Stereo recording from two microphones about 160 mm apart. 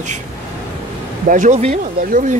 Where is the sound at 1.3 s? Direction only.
50° right (ahead or behind).